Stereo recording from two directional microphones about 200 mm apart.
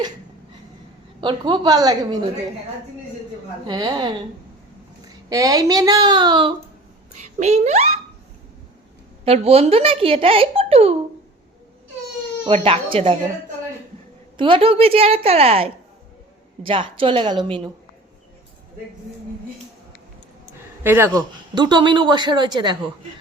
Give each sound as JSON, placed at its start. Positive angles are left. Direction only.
{"t": 1.2, "sound": "a man's voice", "side_deg": -25}
{"t": 3.7, "sound": "a man's voice", "side_deg": -20}
{"t": 5.3, "sound": "a man's voice", "side_deg": -20}
{"t": 7.2, "sound": "speech", "side_deg": -35}
{"t": 9.2, "sound": "a man's voice", "side_deg": -30}
{"t": 12.5, "sound": "speech", "side_deg": -30}
{"t": 14.3, "sound": "a man's voice", "side_deg": -25}
{"t": 20.8, "sound": "speech", "side_deg": -10}
{"t": 21.1, "sound": "a man's voice", "side_deg": -20}